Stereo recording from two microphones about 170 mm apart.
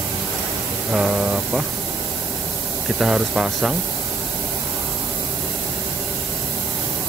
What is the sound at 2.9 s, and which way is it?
Speech, 5° right (ahead or behind).